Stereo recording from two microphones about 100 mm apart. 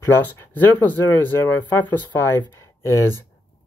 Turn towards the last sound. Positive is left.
turn(degrees=30)  # may be behind; listen again after turning